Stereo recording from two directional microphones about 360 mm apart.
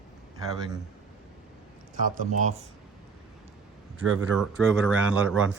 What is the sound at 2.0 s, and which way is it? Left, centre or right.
Speech, right.